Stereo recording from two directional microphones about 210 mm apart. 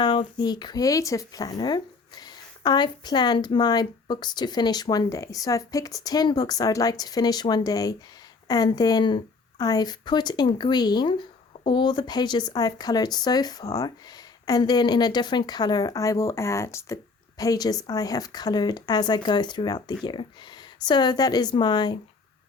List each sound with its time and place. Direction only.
0.0 s speech: 20° left (ahead or behind)